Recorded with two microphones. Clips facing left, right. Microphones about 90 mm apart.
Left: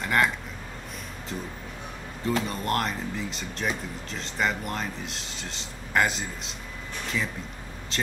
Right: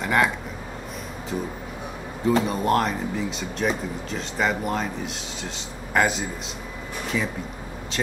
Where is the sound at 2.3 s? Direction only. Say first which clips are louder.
Right 6 dB; 5° right (ahead or behind).